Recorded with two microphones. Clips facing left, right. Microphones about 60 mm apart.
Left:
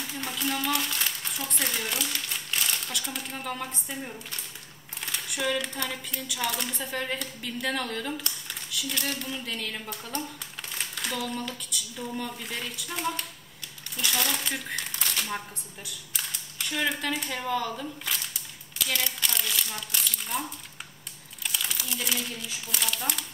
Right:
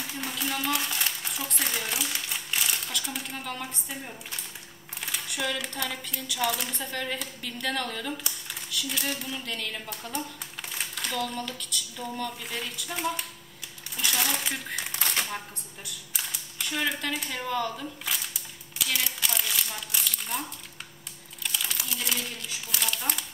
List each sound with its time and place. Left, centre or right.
0.2 s speech: centre
8.2 s speech: centre
10.7 s a sound: centre
12.0 s speech: centre
15.2 s speech: centre
16.1 s a sound: centre
16.5 s speech: centre